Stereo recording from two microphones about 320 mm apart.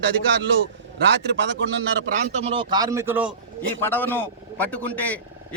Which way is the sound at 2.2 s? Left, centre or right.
Right.